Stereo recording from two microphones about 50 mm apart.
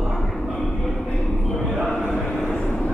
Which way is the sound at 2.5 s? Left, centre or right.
Centre.